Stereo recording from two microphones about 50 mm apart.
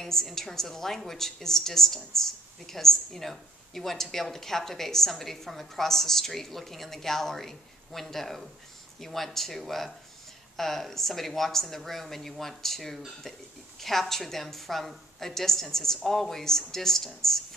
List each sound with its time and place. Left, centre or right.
0.0 s a woman's voice: centre